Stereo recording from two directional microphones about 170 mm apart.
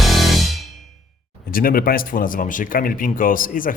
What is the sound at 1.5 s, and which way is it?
Speech, 55° left (ahead or behind).